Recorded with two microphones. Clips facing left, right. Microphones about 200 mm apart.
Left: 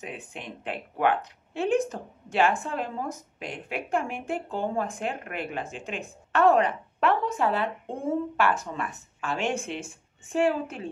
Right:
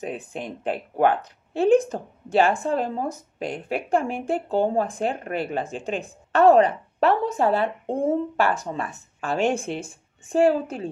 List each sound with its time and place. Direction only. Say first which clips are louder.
0.0 s a woman's voice: right 7 dB; 40° right (ahead or behind)